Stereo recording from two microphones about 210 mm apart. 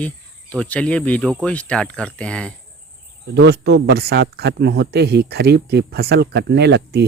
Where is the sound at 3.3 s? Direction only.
50° right (ahead or behind).